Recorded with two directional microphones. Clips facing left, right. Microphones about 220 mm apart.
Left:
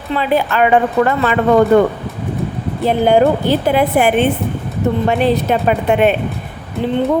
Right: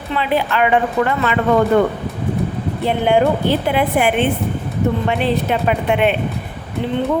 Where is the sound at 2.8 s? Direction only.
40° left (ahead or behind).